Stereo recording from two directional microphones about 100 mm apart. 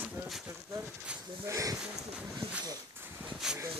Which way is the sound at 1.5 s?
35° right (ahead or behind).